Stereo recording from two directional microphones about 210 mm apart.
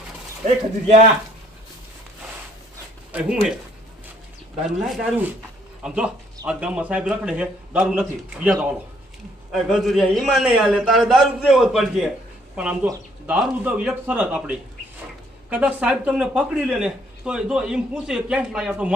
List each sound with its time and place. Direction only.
0.4 s a man's voice: 30° right (ahead or behind)
3.1 s speech: 5° right (ahead or behind)
4.8 s speech: centre (ahead or behind)